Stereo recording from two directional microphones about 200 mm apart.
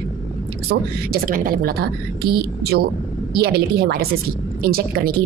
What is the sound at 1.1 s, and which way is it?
A woman's voice, 45° right (ahead or behind).